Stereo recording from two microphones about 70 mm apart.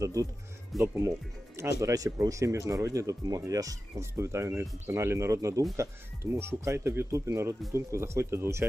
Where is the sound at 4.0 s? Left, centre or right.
Right.